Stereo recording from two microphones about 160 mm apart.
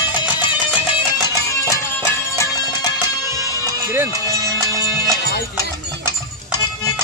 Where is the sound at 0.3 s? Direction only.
30° left (ahead or behind).